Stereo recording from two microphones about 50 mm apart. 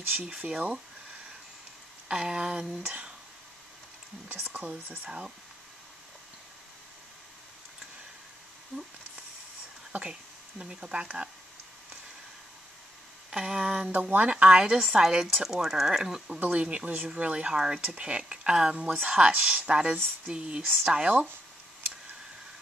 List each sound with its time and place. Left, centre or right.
0.2 s speech: right
2.0 s speech: centre
4.3 s speech: right
5.0 s speech: centre
10.6 s speech: right
13.3 s speech: centre
13.9 s speech: right
14.8 s speech: centre
16.4 s speech: right